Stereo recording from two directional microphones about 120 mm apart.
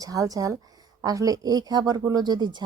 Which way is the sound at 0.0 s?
30° right (ahead or behind).